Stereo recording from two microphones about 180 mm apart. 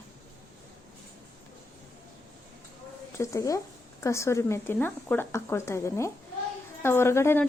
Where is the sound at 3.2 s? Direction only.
15° left (ahead or behind).